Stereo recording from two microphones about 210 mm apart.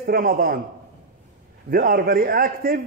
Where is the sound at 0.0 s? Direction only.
45° right (ahead or behind).